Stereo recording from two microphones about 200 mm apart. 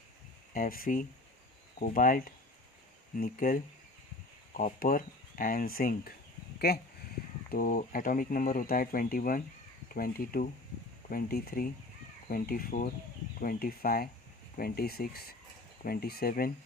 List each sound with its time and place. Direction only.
0.5 s speech: 45° left (ahead or behind)
7.5 s speech: 45° left (ahead or behind)